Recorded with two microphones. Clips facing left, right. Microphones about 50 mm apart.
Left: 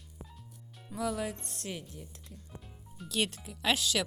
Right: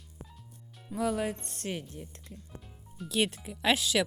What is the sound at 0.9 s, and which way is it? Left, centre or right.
Speech, right.